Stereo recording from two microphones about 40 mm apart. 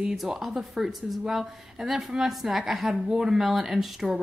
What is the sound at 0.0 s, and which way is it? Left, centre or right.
Speech, centre.